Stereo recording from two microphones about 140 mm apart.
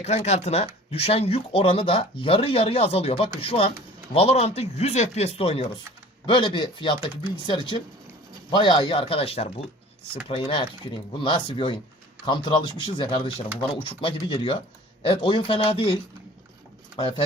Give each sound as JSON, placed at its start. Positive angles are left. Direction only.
{"t": 0.0, "sound": "speech", "side_deg": 50}